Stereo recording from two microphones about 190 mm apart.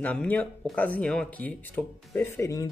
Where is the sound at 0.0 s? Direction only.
5° left (ahead or behind).